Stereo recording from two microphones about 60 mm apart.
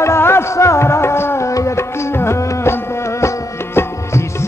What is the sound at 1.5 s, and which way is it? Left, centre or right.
Music, left.